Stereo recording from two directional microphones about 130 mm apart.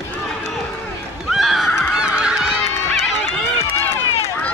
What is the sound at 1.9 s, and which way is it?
Honk, 5° right (ahead or behind).